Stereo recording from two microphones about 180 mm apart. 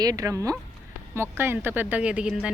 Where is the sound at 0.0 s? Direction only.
20° right (ahead or behind).